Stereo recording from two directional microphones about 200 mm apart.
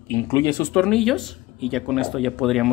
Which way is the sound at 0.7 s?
5° left (ahead or behind).